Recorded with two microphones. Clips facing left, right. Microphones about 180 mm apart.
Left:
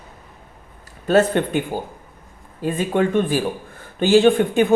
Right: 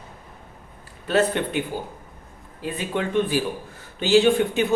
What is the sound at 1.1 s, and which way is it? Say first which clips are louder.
Speech: left 5 dB; 45° left (ahead or behind).